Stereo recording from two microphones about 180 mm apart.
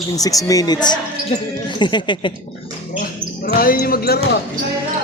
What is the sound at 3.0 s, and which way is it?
Speech, 55° left (ahead or behind).